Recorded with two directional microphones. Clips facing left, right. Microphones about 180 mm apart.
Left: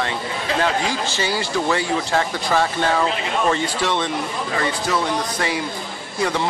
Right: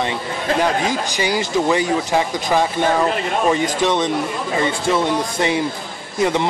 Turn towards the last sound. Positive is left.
turn(degrees=-20)  # may be behind; listen again after turning